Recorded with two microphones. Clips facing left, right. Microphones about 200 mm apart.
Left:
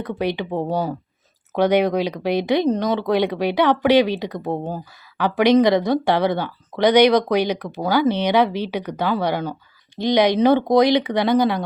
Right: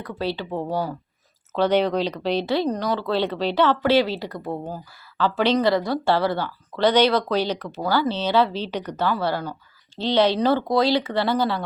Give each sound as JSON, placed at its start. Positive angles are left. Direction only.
{"t": 0.0, "sound": "speech", "side_deg": 20}
{"t": 5.1, "sound": "speech", "side_deg": 15}